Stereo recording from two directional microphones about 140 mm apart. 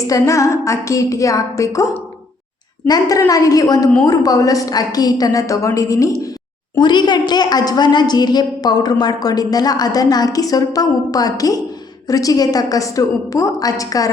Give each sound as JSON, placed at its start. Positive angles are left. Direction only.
{"t": 0.1, "sound": "a woman's voice", "side_deg": 20}